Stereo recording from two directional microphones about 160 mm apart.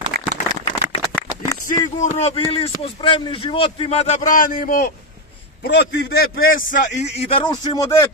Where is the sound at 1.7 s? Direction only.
45° left (ahead or behind).